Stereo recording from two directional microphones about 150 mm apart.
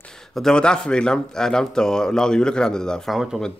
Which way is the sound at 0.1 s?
5° left (ahead or behind).